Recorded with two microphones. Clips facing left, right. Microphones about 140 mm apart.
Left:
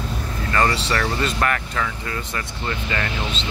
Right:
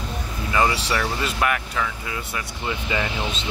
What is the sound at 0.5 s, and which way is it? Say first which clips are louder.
Speech: left 1 dB; 10° right (ahead or behind).